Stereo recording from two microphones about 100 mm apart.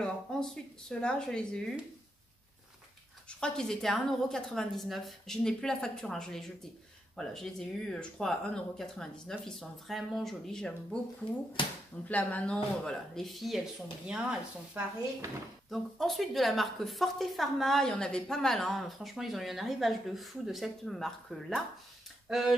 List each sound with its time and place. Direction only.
0.0 s speech: 5° left (ahead or behind)
3.3 s a woman's voice: 10° left (ahead or behind)
11.6 s speech: 55° left (ahead or behind)
12.1 s speech: 15° left (ahead or behind)
12.8 s a woman's voice: 5° left (ahead or behind)